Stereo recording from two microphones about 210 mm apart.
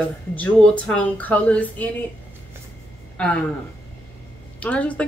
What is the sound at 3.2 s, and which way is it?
Speech, 5° left (ahead or behind).